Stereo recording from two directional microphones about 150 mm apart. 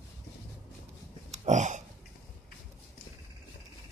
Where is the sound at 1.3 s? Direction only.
55° right (ahead or behind).